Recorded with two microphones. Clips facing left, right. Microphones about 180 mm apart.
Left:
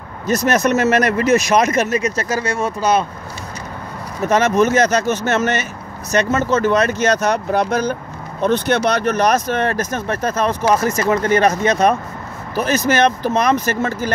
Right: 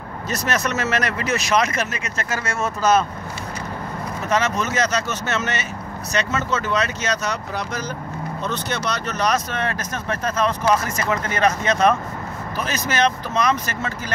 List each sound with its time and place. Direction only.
0.3 s speech: 45° left (ahead or behind)
4.3 s speech: 50° left (ahead or behind)